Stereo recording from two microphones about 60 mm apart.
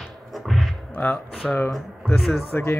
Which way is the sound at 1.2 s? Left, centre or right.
Centre.